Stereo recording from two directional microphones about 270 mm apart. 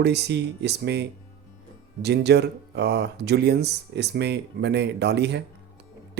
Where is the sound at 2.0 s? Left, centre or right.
Right.